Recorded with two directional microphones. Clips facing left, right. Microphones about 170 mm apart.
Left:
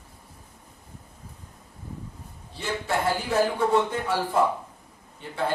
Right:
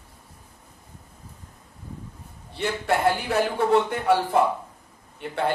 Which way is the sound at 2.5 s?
65° right (ahead or behind).